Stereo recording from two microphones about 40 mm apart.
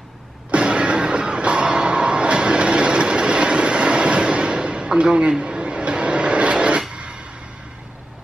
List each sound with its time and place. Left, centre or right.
0.5 s music: right